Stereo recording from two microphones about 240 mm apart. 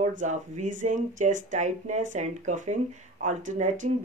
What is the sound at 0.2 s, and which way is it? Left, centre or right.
Speech, right.